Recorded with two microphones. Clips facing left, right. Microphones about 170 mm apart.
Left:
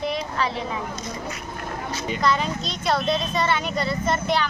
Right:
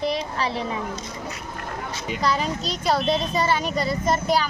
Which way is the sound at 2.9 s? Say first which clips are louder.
Even; 35° right (ahead or behind).